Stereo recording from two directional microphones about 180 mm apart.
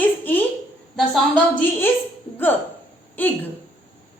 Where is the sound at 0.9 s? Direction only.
Centre (ahead or behind).